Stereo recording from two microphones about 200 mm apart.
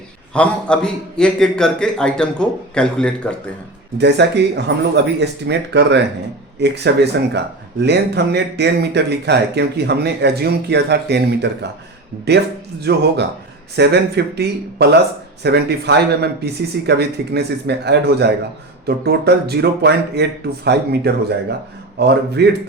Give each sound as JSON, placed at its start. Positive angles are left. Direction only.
{"t": 0.3, "sound": "a man's voice", "side_deg": 5}
{"t": 3.9, "sound": "speech", "side_deg": -60}
{"t": 12.8, "sound": "speech", "side_deg": -55}